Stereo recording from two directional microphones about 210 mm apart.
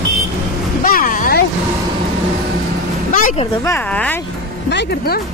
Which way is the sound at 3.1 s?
40° left (ahead or behind).